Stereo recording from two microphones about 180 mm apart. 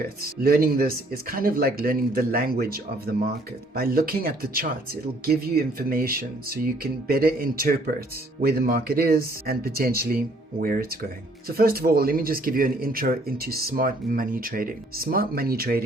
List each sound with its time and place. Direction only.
0.2 s speech: 55° right (ahead or behind)